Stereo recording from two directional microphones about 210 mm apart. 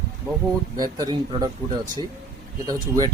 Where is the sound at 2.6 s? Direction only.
20° right (ahead or behind).